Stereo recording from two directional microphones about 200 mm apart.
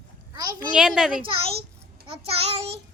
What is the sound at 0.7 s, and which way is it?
Speech, 5° right (ahead or behind).